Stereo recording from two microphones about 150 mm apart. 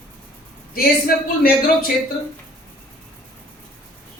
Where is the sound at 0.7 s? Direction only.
80° left.